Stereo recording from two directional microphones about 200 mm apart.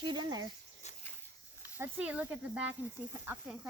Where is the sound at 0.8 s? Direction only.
35° left (ahead or behind).